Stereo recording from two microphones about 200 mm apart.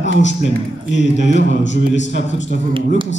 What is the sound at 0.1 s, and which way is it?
Speech, 65° left (ahead or behind).